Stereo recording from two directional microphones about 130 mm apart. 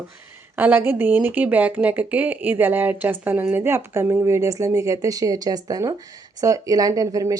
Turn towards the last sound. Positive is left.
turn(degrees=-25)  # may be behind; listen again after turning